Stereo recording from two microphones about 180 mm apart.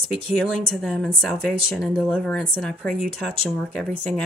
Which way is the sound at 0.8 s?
5° left (ahead or behind).